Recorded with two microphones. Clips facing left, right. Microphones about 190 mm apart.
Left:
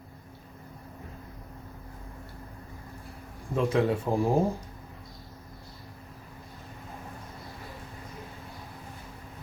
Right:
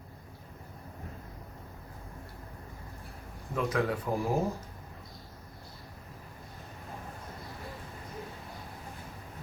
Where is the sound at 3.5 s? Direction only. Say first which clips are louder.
Left 5 dB; 25° left (ahead or behind).